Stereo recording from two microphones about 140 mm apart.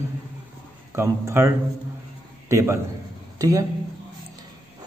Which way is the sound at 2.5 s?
20° right (ahead or behind).